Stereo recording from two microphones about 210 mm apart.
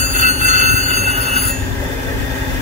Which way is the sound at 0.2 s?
35° right (ahead or behind).